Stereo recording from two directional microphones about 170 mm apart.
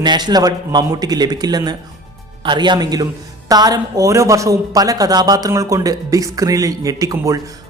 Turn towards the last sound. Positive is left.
turn(degrees=-20)  # may be behind; listen again after turning